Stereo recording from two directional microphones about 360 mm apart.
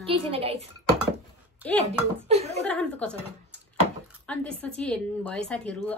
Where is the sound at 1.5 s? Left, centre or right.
Centre.